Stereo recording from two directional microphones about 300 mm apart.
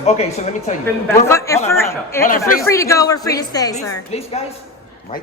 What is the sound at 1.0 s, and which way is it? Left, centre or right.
A man's voice, centre.